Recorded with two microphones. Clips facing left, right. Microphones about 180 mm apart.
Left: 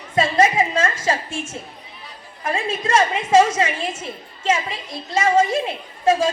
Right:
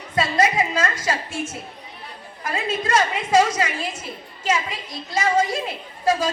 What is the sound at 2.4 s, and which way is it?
A woman's voice, 30° left (ahead or behind).